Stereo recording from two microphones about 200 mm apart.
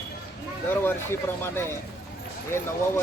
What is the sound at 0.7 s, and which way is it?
Speech, 10° left (ahead or behind).